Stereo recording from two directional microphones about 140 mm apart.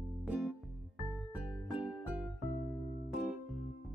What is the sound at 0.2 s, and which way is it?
Music, centre (ahead or behind).